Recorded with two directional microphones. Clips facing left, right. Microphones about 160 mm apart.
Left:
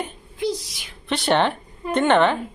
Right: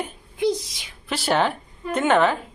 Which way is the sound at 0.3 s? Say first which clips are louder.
Right 3 dB; 20° right (ahead or behind).